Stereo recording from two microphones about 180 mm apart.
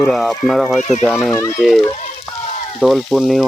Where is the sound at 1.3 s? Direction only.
15° left (ahead or behind).